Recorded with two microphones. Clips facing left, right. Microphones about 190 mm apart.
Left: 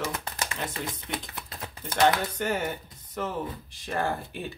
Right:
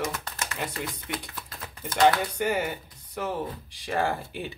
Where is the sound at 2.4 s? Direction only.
10° right (ahead or behind).